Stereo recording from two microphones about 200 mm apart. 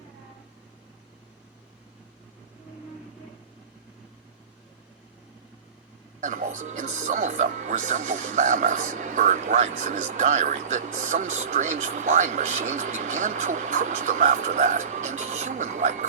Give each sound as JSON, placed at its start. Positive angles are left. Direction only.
{"t": 6.1, "sound": "speech", "side_deg": -40}